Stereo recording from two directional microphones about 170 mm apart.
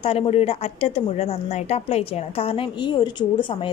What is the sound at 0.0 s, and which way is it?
A woman's voice, 35° left (ahead or behind).